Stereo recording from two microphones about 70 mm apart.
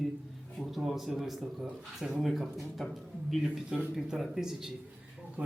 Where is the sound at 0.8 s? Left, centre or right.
Centre.